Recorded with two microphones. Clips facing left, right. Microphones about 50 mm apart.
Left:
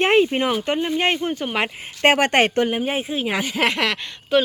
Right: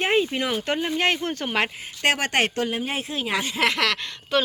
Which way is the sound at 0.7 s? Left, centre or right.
Centre.